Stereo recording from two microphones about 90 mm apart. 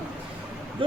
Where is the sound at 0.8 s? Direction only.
75° right (ahead or behind).